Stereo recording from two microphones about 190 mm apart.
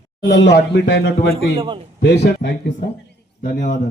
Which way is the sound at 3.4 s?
45° left (ahead or behind).